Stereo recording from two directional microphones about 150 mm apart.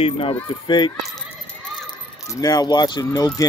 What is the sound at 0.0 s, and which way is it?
Speech, 40° left (ahead or behind).